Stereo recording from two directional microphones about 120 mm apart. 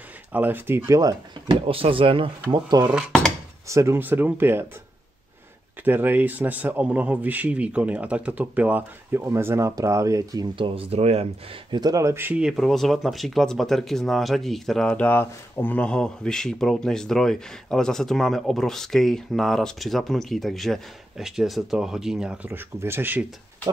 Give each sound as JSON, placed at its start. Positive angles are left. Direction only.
{"t": 0.3, "sound": "a man's voice", "side_deg": -15}
{"t": 1.5, "sound": "speech", "side_deg": -50}
{"t": 2.9, "sound": "speech", "side_deg": -10}
{"t": 3.6, "sound": "speech", "side_deg": -25}
{"t": 5.9, "sound": "a man's voice", "side_deg": -15}
{"t": 10.5, "sound": "speech", "side_deg": -50}
{"t": 11.7, "sound": "speech", "side_deg": -30}
{"t": 12.4, "sound": "speech", "side_deg": -5}